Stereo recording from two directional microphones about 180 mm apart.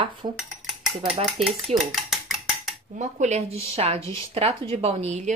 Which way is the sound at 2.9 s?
40° right (ahead or behind).